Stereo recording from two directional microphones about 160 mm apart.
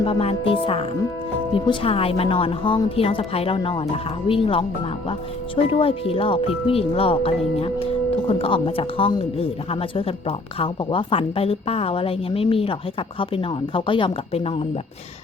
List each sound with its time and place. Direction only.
0.0 s a woman's voice: 35° left (ahead or behind)